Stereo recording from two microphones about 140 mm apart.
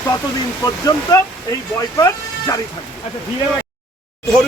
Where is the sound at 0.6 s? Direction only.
25° left (ahead or behind).